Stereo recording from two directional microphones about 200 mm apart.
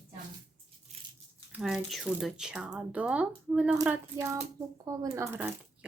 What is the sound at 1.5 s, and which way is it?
Speech, centre (ahead or behind).